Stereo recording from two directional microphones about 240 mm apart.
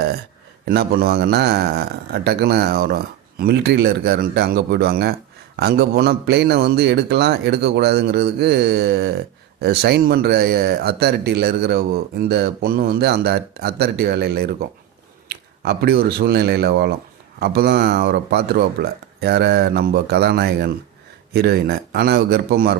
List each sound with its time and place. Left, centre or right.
0.6 s a man's voice: right